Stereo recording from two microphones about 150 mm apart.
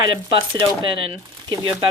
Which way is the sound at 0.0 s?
35° right (ahead or behind).